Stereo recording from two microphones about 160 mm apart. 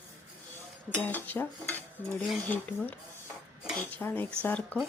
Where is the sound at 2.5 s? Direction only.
10° left (ahead or behind).